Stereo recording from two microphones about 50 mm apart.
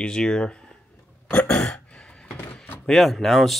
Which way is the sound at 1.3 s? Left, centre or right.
Left.